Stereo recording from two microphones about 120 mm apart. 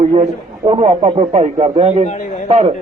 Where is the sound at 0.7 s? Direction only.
55° right (ahead or behind).